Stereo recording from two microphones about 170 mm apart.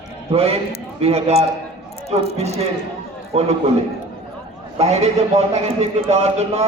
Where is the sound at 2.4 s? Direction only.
40° right (ahead or behind).